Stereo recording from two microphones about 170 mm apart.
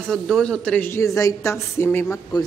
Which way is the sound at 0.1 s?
5° left (ahead or behind).